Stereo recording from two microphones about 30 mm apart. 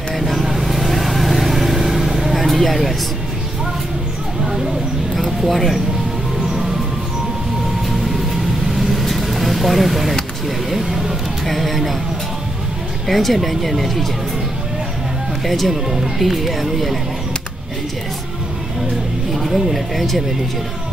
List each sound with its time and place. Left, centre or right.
0.1 s vehicle: centre
5.1 s a sound: centre
8.1 s vehicle: centre
10.7 s a sound: centre
13.0 s speech: centre
15.4 s speech: centre
19.3 s speech: centre